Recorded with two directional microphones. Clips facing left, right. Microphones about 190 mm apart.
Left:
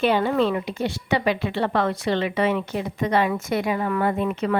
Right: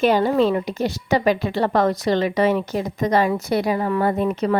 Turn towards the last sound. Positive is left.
turn(degrees=-40)  # may be behind; listen again after turning